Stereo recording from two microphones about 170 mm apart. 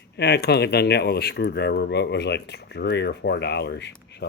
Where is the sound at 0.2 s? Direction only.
75° left (ahead or behind).